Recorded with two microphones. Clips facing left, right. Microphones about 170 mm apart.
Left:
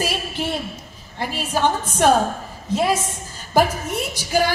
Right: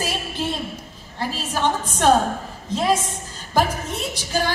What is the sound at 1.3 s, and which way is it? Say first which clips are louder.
Speech: left 3 dB; 10° left (ahead or behind).